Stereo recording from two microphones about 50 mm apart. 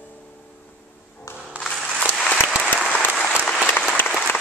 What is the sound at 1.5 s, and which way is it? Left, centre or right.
Music, right.